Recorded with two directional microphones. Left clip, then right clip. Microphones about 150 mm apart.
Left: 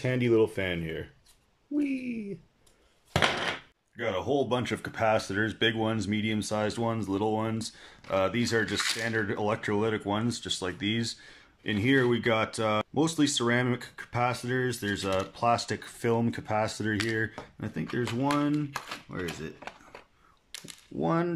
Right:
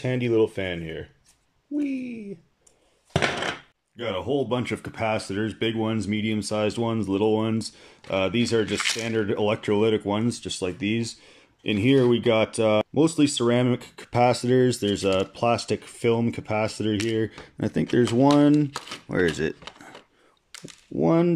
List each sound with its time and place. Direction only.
0.0 s speech: centre (ahead or behind)
1.8 s a sound: centre (ahead or behind)
3.1 s a sound: 10° right (ahead or behind)
3.9 s speech: 5° right (ahead or behind)
13.9 s speech: 30° right (ahead or behind)
17.3 s speech: 30° right (ahead or behind)
19.0 s speech: 60° right (ahead or behind)
21.0 s speech: 15° right (ahead or behind)